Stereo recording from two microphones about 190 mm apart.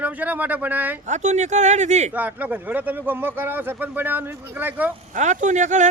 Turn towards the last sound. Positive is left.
turn(degrees=-40)  # may be behind; listen again after turning